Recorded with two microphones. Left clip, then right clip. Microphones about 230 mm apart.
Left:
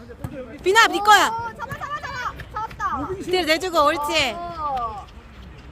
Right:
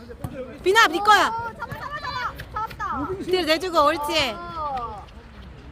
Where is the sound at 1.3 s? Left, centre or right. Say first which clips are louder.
Left 1 dB; left.